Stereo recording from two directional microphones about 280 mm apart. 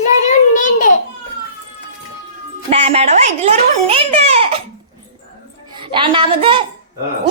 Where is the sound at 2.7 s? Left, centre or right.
Right.